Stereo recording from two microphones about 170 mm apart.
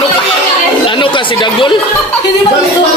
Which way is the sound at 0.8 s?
30° left (ahead or behind).